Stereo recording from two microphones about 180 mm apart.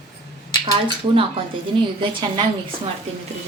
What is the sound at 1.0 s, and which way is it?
Speech, 30° right (ahead or behind).